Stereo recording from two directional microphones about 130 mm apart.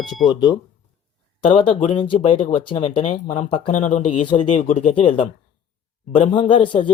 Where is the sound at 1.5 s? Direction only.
40° left (ahead or behind).